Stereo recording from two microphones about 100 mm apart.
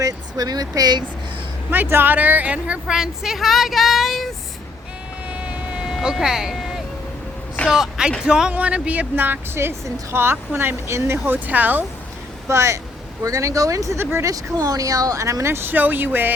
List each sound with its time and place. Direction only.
0.0 s speech: 40° right (ahead or behind)
1.7 s speech: 20° right (ahead or behind); by 4.3 s centre (ahead or behind)
5.8 s vehicle: 5° right (ahead or behind)
7.7 s a woman's voice: 5° right (ahead or behind)
12.5 s a woman's voice: 30° right (ahead or behind)
14.3 s speech: 35° right (ahead or behind); by 16.3 s 20° right (ahead or behind)